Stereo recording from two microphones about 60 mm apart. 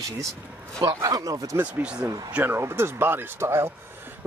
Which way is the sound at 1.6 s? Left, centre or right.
Centre.